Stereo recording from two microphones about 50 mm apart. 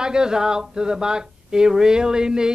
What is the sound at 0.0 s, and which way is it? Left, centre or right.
Speech, centre.